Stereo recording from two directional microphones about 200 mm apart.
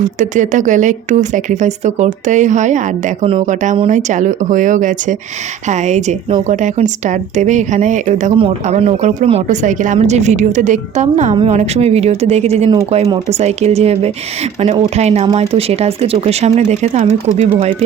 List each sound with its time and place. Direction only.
0.0 s speech: 40° right (ahead or behind)